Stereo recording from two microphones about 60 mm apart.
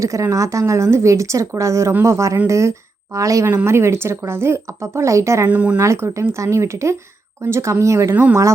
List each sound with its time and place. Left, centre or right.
0.0 s speech: right
3.5 s speech: right
5.5 s speech: right
5.7 s speech: right
8.1 s speech: right